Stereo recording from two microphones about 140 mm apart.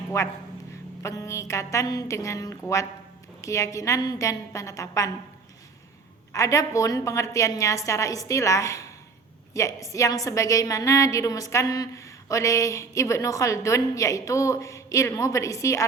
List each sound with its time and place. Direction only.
0.1 s a woman's voice: 20° left (ahead or behind)
6.3 s a woman's voice: 25° left (ahead or behind)